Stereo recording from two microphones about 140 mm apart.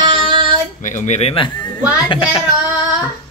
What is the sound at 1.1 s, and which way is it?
Speech, 45° left (ahead or behind).